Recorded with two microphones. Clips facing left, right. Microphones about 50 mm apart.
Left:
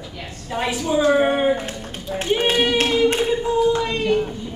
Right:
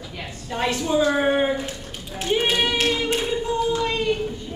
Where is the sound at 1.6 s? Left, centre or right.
Left.